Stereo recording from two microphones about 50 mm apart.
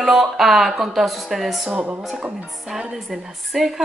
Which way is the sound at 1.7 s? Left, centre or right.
Right.